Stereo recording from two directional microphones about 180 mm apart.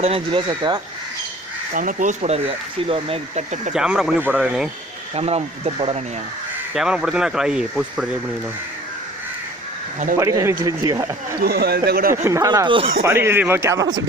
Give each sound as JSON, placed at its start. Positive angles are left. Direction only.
{"t": 0.0, "sound": "speech", "side_deg": -30}
{"t": 1.7, "sound": "speech", "side_deg": -45}
{"t": 3.7, "sound": "speech", "side_deg": -5}
{"t": 5.1, "sound": "speech", "side_deg": -35}
{"t": 6.7, "sound": "speech", "side_deg": -5}
{"t": 10.2, "sound": "speech", "side_deg": -15}
{"t": 11.3, "sound": "speech", "side_deg": -60}
{"t": 12.1, "sound": "speech", "side_deg": -15}
{"t": 13.1, "sound": "speech", "side_deg": -15}